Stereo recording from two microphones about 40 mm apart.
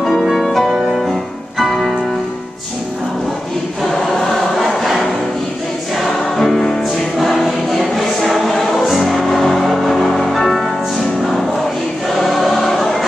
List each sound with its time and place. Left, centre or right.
0.3 s music: centre
3.9 s choir: centre
4.6 s music: centre
6.0 s music: centre
12.2 s choir: centre